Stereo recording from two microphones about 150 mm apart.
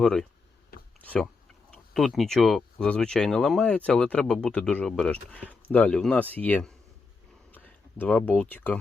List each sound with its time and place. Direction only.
0.0 s speech: 5° left (ahead or behind)